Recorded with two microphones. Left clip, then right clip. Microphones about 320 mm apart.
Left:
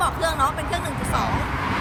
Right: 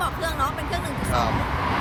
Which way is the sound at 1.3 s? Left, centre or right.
Right.